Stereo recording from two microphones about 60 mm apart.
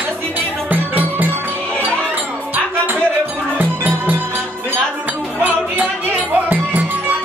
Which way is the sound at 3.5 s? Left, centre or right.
Right.